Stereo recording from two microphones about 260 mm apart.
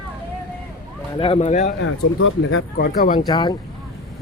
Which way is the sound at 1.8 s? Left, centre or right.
Left.